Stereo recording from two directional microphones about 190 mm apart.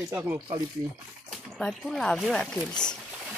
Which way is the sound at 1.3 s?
5° left (ahead or behind).